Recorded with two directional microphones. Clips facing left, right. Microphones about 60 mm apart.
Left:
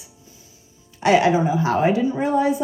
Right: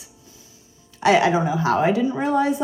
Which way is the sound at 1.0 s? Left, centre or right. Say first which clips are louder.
Left 1 dB; left.